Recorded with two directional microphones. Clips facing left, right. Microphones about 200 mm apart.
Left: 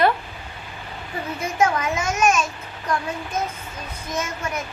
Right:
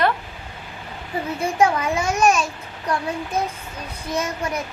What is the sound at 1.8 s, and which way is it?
Speech, 35° right (ahead or behind).